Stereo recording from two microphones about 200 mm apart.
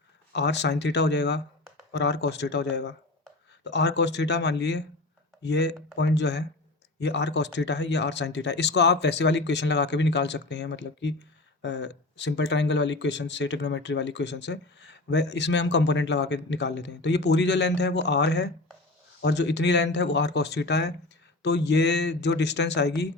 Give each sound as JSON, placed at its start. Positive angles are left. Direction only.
{"t": 0.3, "sound": "speech", "side_deg": 60}